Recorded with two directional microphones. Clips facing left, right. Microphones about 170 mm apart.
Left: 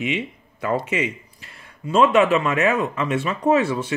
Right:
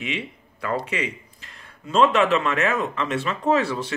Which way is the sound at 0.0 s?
15° left (ahead or behind).